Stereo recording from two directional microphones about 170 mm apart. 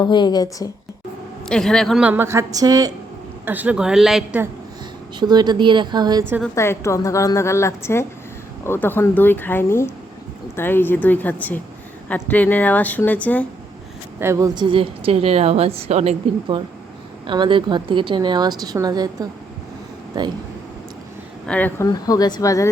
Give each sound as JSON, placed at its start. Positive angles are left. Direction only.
{"t": 0.0, "sound": "speech", "side_deg": 25}
{"t": 1.5, "sound": "speech", "side_deg": 5}
{"t": 3.4, "sound": "speech", "side_deg": -10}
{"t": 5.2, "sound": "a woman's voice", "side_deg": -25}
{"t": 6.5, "sound": "a woman's voice", "side_deg": 15}
{"t": 14.2, "sound": "a woman's voice", "side_deg": -15}
{"t": 21.4, "sound": "a woman's voice", "side_deg": 10}
{"t": 21.8, "sound": "speech", "side_deg": 20}